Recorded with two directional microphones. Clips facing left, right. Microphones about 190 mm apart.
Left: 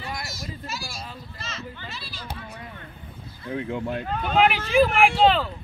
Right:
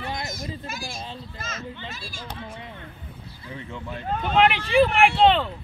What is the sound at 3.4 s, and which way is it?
Speech, 55° left (ahead or behind).